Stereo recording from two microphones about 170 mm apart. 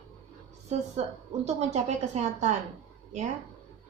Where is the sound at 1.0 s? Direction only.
40° right (ahead or behind).